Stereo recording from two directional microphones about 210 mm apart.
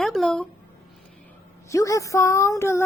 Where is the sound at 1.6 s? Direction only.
15° left (ahead or behind).